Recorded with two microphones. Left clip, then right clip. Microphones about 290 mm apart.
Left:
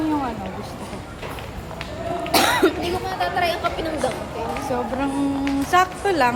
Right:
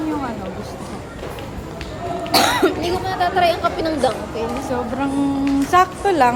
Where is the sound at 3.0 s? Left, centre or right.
Right.